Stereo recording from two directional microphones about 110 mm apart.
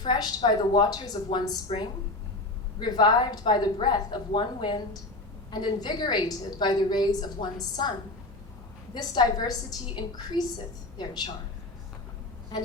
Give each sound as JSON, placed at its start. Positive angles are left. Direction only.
{"t": 0.0, "sound": "a woman's voice", "side_deg": 45}
{"t": 9.0, "sound": "a woman's voice", "side_deg": 40}
{"t": 12.5, "sound": "vehicle", "side_deg": 40}